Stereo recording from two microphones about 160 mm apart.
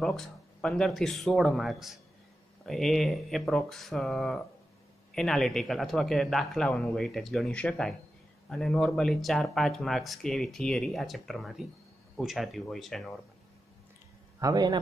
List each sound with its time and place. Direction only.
0.0 s speech: 5° left (ahead or behind)
14.4 s a man's voice: 25° right (ahead or behind)